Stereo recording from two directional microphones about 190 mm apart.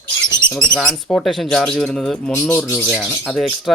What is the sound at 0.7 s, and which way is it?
Speech, 5° left (ahead or behind).